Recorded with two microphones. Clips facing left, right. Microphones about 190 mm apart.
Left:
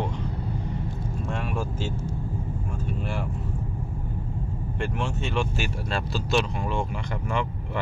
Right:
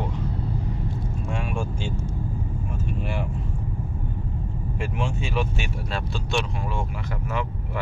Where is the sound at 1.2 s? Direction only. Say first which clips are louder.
Right 1 dB; centre (ahead or behind).